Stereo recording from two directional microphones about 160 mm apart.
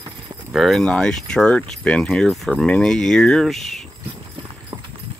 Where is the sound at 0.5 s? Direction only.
Centre (ahead or behind).